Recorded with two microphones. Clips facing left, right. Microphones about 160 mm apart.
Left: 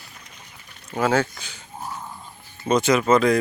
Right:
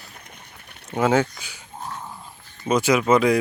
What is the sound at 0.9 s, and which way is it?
Speech, 20° right (ahead or behind).